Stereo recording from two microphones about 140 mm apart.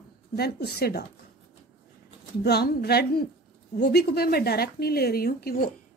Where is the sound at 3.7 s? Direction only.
90° left.